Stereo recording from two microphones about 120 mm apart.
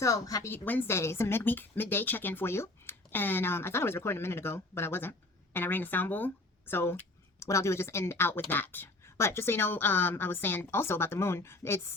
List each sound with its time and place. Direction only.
0.0 s speech: 30° left (ahead or behind)
0.5 s speech: 15° left (ahead or behind)